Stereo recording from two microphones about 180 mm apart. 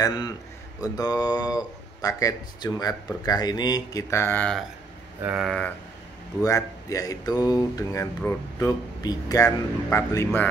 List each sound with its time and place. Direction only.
0.0 s speech: 20° left (ahead or behind); by 4.6 s 5° left (ahead or behind)
5.2 s a sound: 5° right (ahead or behind)
5.5 s speech: 5° left (ahead or behind)
6.4 s speech: 20° left (ahead or behind)